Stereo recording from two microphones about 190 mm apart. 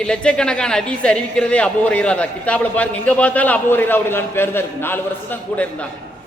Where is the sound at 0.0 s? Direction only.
5° left (ahead or behind).